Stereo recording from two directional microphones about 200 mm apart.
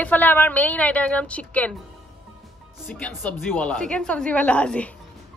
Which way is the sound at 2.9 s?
5° left (ahead or behind).